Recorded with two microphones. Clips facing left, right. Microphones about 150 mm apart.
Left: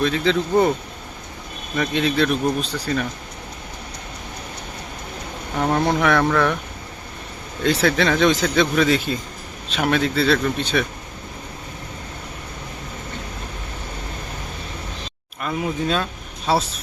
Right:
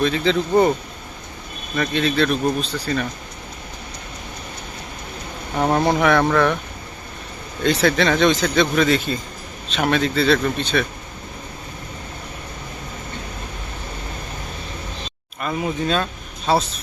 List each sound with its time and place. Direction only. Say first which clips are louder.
0.0 s speech: right 1 dB; centre (ahead or behind)
1.7 s speech: even; 10° left (ahead or behind)
5.5 s speech: right 2 dB; 20° right (ahead or behind)
5.8 s speech: right 1 dB; 5° right (ahead or behind)
7.6 s speech: right 1 dB; 5° left (ahead or behind)
15.4 s speech: right 1 dB; centre (ahead or behind)